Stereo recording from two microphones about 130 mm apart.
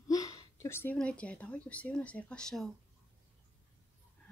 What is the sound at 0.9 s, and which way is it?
Speech, 10° left (ahead or behind).